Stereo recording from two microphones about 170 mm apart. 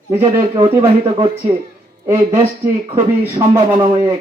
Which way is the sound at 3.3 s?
20° right (ahead or behind).